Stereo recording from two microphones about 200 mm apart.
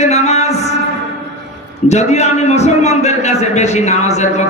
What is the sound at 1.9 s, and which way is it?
A man's voice, 35° left (ahead or behind).